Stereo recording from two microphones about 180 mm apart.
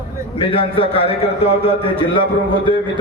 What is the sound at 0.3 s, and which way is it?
A man's voice, 30° left (ahead or behind).